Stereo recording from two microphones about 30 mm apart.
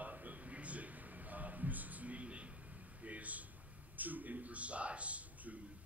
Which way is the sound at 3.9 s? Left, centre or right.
Right.